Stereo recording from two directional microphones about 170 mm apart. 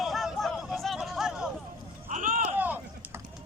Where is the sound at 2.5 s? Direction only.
10° right (ahead or behind).